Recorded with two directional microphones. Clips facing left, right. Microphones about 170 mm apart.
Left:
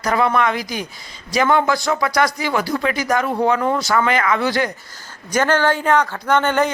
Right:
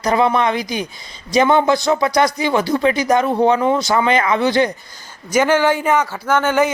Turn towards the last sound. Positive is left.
turn(degrees=-5)  # may be behind; listen again after turning